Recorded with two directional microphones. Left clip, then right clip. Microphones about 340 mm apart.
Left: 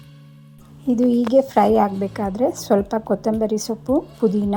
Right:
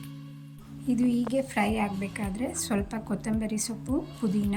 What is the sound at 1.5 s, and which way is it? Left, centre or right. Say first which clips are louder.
Speech: left 13 dB; left.